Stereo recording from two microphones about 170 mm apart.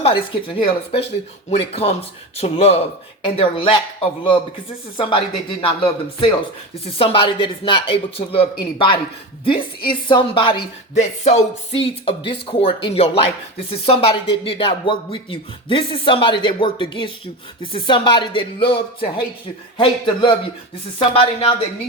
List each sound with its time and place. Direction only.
0.0 s speech: 30° left (ahead or behind)
10.9 s speech: 40° left (ahead or behind)